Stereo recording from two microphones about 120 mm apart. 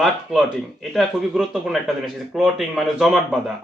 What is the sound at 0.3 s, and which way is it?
Speech, centre (ahead or behind).